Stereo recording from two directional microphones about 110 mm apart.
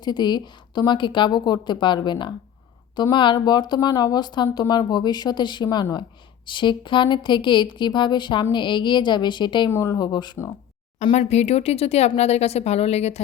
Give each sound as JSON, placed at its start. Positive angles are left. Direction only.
{"t": 0.0, "sound": "a woman's voice", "side_deg": 40}
{"t": 9.6, "sound": "speech", "side_deg": 25}
{"t": 11.1, "sound": "speech", "side_deg": 85}